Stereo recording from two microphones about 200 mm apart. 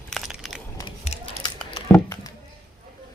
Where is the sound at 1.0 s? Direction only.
30° left (ahead or behind).